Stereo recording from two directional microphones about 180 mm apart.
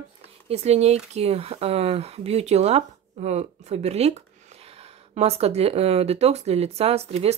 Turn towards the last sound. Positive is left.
turn(degrees=-35)  # may be behind; listen again after turning